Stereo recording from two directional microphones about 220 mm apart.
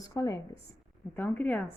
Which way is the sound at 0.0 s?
15° left (ahead or behind).